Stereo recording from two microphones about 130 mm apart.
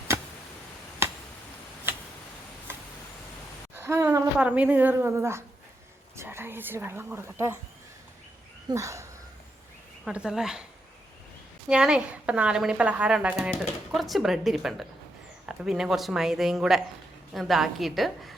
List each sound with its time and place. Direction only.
3.8 s a woman's voice: 20° right (ahead or behind)
4.4 s speech: 10° right (ahead or behind)
8.7 s a sound: 25° right (ahead or behind)
10.1 s speech: 5° right (ahead or behind)
11.7 s speech: 5° right (ahead or behind)